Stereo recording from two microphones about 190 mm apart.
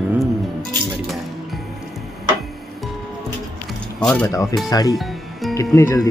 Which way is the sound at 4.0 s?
5° left (ahead or behind).